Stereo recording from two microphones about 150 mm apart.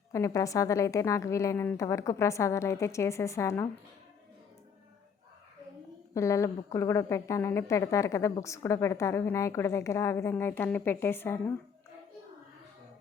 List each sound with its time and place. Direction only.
0.1 s a woman's voice: 20° left (ahead or behind)
6.1 s a woman's voice: 20° left (ahead or behind)